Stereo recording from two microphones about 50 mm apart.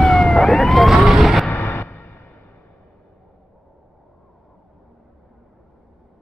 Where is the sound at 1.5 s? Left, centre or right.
Left.